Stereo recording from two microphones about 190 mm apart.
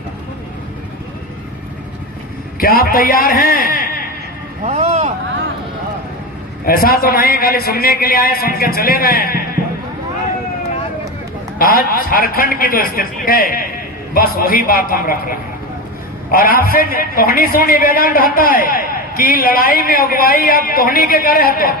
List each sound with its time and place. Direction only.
2.6 s a man's voice: 50° left (ahead or behind)
4.6 s vehicle: 35° right (ahead or behind)
6.7 s a man's voice: 50° left (ahead or behind)
11.6 s a man's voice: 50° left (ahead or behind)